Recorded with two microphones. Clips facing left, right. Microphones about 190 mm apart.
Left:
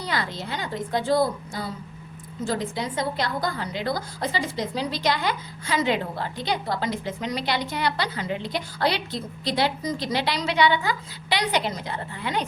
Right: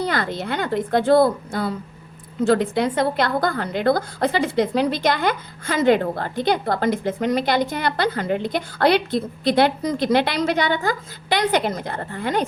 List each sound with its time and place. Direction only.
0.0 s a woman's voice: 55° right (ahead or behind)